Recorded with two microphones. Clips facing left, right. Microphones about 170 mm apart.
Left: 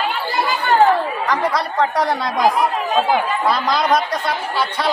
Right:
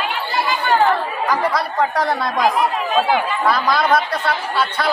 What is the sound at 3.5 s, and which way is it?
Speech, 20° left (ahead or behind).